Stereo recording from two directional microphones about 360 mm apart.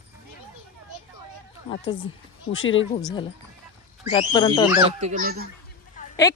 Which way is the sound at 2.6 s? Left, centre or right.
Left.